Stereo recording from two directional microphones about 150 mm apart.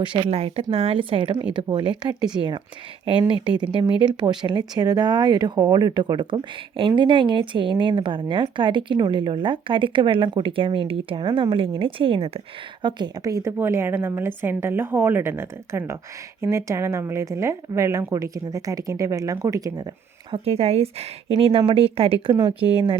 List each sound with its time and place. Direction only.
0.0 s speech: 35° right (ahead or behind)
12.8 s a woman's voice: 30° right (ahead or behind)
20.3 s speech: 40° right (ahead or behind)